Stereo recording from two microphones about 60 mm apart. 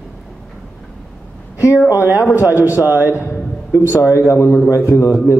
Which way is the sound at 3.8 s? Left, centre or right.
Left.